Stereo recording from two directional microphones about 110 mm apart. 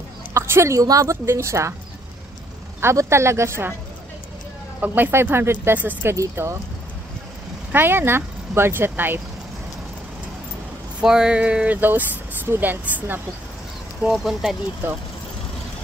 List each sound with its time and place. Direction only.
0.3 s speech: 25° right (ahead or behind)
2.8 s speech: 25° right (ahead or behind)
4.8 s speech: 15° right (ahead or behind)
6.1 s speech: 30° right (ahead or behind)
7.7 s speech: 20° right (ahead or behind)
11.0 s a sound: 5° right (ahead or behind)
14.0 s speech: 5° right (ahead or behind)